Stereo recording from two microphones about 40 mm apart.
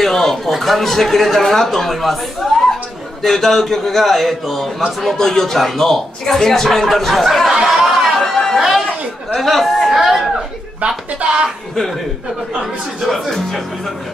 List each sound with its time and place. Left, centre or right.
0.0 s a sound: centre
0.6 s a man's voice: centre
11.1 s speech: right
13.0 s a man's voice: centre